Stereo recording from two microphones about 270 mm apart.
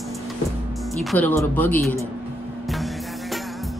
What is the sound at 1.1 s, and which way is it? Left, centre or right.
Speech, centre.